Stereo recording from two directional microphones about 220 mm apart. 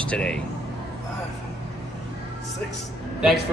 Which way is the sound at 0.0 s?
5° left (ahead or behind).